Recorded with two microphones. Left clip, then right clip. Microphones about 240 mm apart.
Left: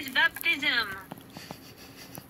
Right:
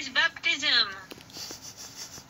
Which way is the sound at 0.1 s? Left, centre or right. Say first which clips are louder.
Left 1 dB; right.